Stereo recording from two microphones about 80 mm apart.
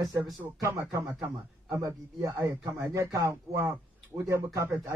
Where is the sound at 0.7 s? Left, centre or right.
Right.